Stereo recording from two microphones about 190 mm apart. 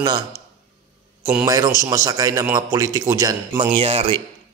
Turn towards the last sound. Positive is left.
turn(degrees=-30)  # may be behind; listen again after turning